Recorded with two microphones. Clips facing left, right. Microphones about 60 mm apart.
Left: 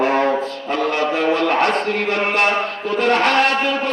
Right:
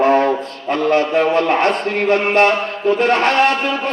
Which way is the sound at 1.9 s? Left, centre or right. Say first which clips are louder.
Right 5 dB; right.